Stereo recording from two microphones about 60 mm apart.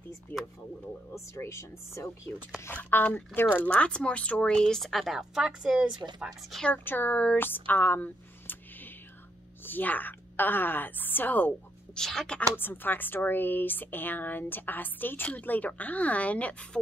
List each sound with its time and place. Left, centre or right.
0.3 s speech: left
1.1 s speech: left
2.7 s speech: left
3.7 s a woman's voice: centre
6.8 s speech: left
11.9 s a woman's voice: centre
12.5 s speech: left